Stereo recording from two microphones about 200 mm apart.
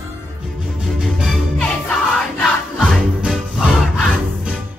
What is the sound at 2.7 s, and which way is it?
Music, 5° right (ahead or behind).